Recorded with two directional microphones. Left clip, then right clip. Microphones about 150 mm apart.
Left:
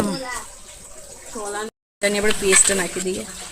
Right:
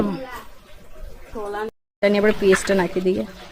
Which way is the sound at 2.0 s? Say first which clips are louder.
Right 3 dB; 60° right (ahead or behind).